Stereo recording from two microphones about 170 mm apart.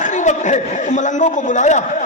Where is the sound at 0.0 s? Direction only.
45° left (ahead or behind).